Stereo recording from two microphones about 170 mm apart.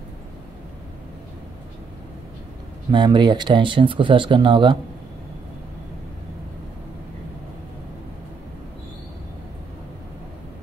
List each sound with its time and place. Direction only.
2.9 s speech: 25° right (ahead or behind)